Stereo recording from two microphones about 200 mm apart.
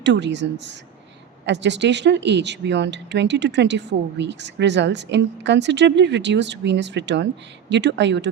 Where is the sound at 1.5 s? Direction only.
60° right (ahead or behind).